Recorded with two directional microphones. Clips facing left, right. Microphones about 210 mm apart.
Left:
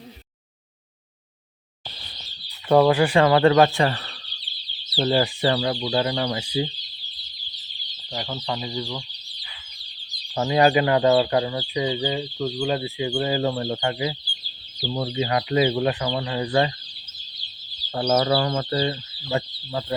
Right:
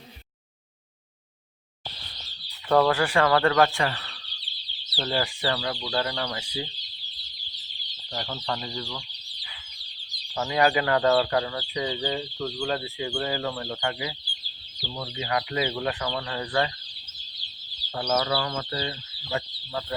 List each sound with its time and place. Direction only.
2.6 s speech: 15° left (ahead or behind); by 4.3 s 35° left (ahead or behind)
4.9 s speech: 25° left (ahead or behind)
8.1 s chicken: 10° left (ahead or behind)
10.3 s speech: 25° left (ahead or behind)
14.8 s speech: 40° left (ahead or behind); by 16.7 s 20° left (ahead or behind)
17.9 s speech: 30° left (ahead or behind)